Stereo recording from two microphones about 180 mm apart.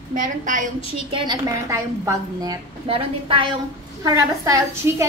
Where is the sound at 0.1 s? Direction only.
45° right (ahead or behind).